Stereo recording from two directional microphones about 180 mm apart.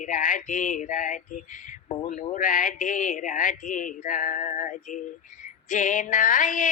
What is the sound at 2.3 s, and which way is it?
A woman's voice, 45° left (ahead or behind).